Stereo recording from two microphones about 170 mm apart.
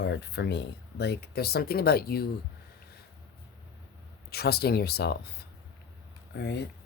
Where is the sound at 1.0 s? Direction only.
70° left (ahead or behind).